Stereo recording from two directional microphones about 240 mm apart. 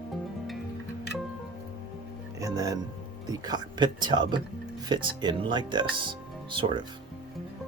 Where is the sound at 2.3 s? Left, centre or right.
Centre.